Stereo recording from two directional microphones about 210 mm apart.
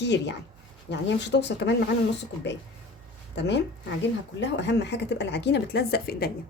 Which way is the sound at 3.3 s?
55° left (ahead or behind).